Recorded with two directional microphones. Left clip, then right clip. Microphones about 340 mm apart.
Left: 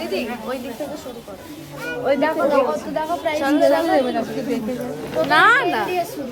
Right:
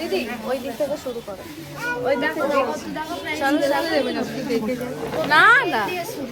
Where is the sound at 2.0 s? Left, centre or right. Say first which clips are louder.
Left 4 dB; centre.